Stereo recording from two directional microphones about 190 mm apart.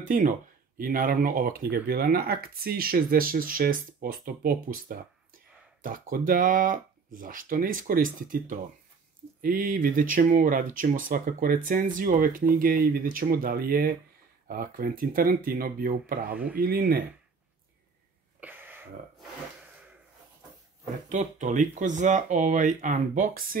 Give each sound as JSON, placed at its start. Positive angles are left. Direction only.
{"t": 0.0, "sound": "speech", "side_deg": -45}
{"t": 18.4, "sound": "a sound", "side_deg": -10}
{"t": 21.1, "sound": "speech", "side_deg": -40}